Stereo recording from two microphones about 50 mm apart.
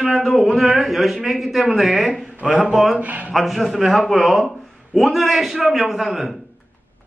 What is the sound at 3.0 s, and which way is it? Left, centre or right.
Speech, right.